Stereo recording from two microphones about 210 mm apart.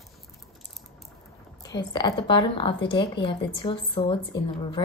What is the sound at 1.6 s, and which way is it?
A woman's voice, 20° left (ahead or behind).